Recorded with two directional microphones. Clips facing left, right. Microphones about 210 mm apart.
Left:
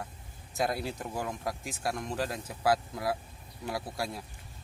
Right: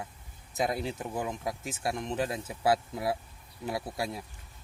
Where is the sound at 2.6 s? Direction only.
25° right (ahead or behind).